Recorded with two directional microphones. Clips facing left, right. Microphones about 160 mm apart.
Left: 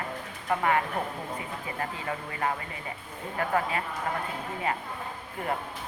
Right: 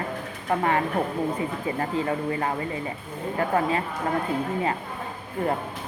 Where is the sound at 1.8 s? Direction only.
30° right (ahead or behind).